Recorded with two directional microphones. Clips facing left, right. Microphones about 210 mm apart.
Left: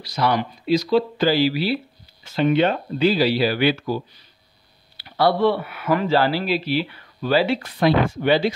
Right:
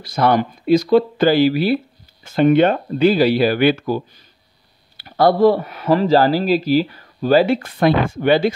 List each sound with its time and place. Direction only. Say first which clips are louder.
0.0 s speech: right 5 dB; 50° right (ahead or behind)